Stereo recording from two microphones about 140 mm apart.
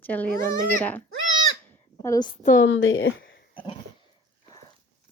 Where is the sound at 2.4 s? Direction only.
70° left (ahead or behind).